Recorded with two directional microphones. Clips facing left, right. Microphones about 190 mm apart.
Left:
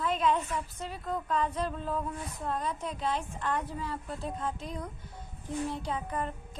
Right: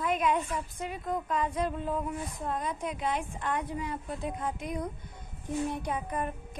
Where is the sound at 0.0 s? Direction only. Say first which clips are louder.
Even; 15° right (ahead or behind).